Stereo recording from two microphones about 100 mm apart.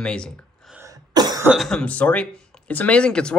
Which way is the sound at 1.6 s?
5° left (ahead or behind).